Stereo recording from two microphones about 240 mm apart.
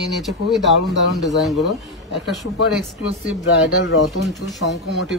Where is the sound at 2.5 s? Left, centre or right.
Left.